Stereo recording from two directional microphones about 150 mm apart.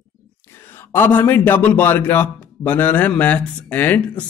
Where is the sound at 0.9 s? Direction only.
15° left (ahead or behind).